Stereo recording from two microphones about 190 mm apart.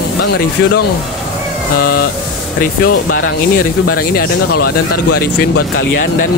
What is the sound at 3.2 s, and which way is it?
Speech, 50° left (ahead or behind).